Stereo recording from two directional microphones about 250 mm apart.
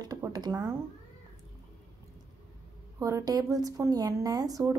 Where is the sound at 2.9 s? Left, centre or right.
Centre.